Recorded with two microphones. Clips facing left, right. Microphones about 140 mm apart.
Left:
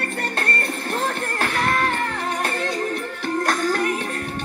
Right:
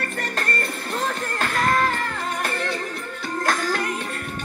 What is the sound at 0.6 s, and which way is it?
Music, 60° left (ahead or behind).